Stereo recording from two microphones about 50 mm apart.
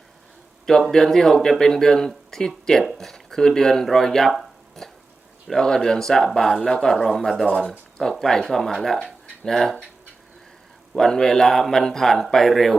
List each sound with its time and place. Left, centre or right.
0.9 s a man's voice: centre
4.8 s a sound: centre
5.5 s a man's voice: centre
10.9 s a man's voice: centre